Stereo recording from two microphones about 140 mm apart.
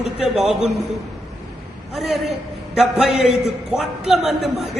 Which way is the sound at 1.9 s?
Centre (ahead or behind).